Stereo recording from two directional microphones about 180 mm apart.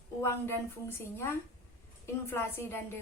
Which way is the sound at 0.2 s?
15° left (ahead or behind).